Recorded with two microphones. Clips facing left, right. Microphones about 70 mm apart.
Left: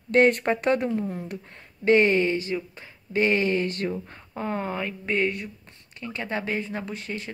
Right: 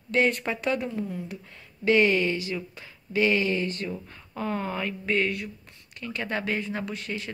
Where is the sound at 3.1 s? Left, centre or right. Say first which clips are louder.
Left 1 dB; left.